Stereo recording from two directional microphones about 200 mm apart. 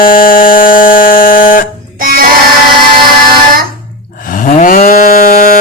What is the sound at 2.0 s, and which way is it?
Child singing, 45° right (ahead or behind).